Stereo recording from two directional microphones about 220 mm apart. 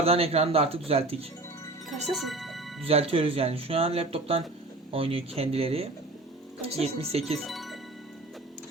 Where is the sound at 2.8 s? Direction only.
25° right (ahead or behind).